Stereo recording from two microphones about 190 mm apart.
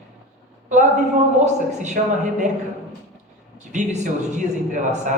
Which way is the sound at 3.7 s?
40° right (ahead or behind).